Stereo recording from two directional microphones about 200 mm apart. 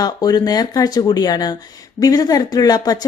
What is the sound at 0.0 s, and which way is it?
A woman's voice, 20° left (ahead or behind).